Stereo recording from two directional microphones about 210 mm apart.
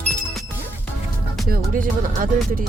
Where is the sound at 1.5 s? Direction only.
40° right (ahead or behind).